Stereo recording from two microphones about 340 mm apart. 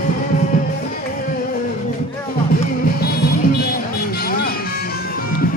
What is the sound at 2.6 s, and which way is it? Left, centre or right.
Music, left.